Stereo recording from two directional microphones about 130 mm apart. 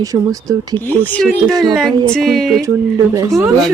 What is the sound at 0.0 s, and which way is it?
Speech, 25° right (ahead or behind).